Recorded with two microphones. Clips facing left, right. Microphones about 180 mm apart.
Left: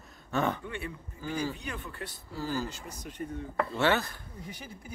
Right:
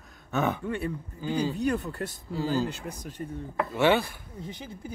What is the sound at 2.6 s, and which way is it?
Speech, 60° right (ahead or behind).